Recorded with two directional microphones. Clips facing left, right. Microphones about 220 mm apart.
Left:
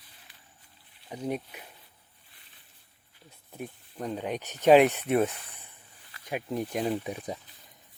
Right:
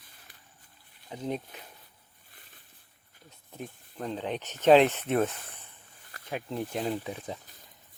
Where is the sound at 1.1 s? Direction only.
10° left (ahead or behind).